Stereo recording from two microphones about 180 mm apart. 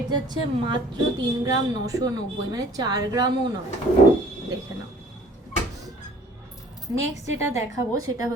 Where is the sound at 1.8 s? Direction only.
20° right (ahead or behind).